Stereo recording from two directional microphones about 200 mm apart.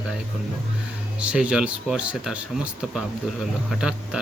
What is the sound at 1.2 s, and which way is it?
Speech, 5° right (ahead or behind).